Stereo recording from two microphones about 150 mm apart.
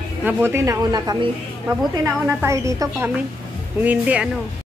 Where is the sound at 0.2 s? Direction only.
15° right (ahead or behind).